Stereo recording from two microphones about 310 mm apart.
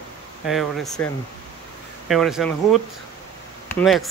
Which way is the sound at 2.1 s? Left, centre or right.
Centre.